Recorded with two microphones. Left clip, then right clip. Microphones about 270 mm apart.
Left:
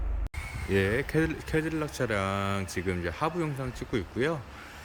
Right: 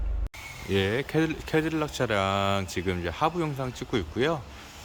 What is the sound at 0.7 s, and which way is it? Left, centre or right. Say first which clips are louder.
Speech: right 1 dB; centre.